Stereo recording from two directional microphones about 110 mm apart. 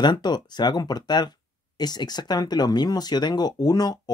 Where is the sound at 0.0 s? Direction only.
40° left (ahead or behind).